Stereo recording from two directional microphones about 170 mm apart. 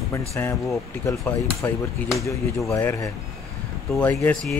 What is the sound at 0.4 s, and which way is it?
Speech, 10° left (ahead or behind).